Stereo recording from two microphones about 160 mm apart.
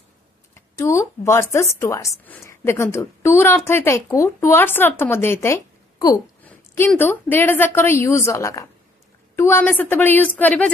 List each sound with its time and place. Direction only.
0.6 s speech: 15° left (ahead or behind)
6.4 s a sound: 15° left (ahead or behind)
7.0 s speech: 15° left (ahead or behind)